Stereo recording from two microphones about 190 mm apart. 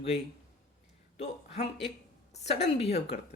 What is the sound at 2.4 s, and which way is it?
Speech, 65° left (ahead or behind).